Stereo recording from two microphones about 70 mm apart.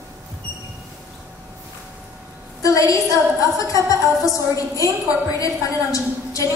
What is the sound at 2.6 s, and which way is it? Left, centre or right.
A woman's voice, left.